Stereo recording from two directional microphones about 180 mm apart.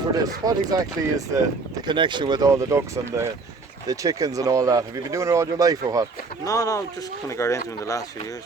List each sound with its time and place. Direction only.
0.1 s speech: 20° right (ahead or behind)
6.4 s speech: 20° left (ahead or behind)